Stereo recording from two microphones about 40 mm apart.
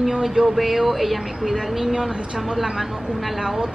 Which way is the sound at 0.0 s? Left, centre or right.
Centre.